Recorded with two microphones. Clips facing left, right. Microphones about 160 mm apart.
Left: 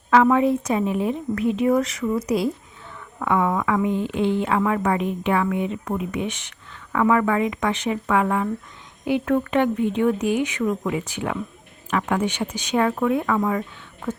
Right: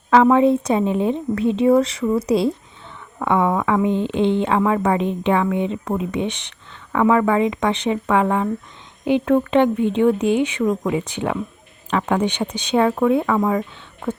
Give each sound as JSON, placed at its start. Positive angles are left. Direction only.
{"t": 0.1, "sound": "a woman's voice", "side_deg": -30}